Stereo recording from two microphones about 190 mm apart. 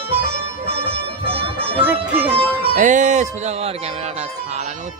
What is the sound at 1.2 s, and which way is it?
Music, 30° right (ahead or behind).